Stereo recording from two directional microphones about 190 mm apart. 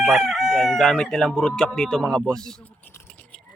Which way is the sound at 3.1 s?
10° left (ahead or behind).